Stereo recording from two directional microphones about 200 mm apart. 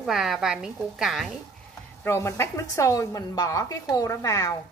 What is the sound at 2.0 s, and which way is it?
A woman's voice, 15° left (ahead or behind).